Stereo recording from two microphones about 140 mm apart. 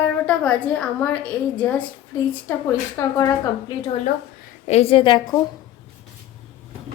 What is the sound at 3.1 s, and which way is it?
Speech, 25° left (ahead or behind).